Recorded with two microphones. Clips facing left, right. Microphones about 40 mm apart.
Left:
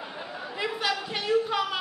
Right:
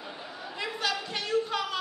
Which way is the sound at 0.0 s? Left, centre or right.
Centre.